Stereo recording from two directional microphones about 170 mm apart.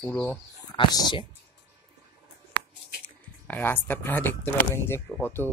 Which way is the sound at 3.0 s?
10° left (ahead or behind).